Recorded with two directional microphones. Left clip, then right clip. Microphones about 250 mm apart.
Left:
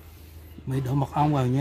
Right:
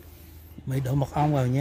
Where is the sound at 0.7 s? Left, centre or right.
Centre.